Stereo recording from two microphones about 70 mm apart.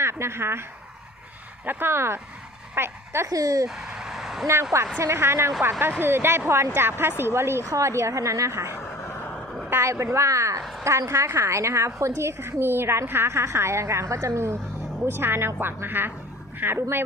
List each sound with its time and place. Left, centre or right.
0.0 s a woman's voice: right
1.6 s a woman's voice: right
3.2 s a woman's voice: right
3.7 s a sound: centre
4.9 s a woman's voice: right
9.8 s a woman's voice: right
10.6 s a sound: centre
10.8 s a woman's voice: right